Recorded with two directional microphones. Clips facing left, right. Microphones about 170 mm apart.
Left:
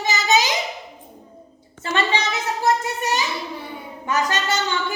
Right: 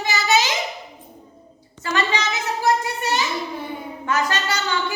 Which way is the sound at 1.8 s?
30° left (ahead or behind).